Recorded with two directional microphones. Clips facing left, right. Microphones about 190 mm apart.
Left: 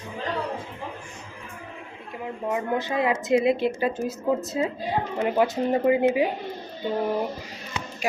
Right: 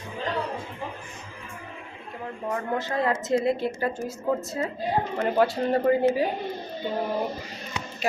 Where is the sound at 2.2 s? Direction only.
15° left (ahead or behind).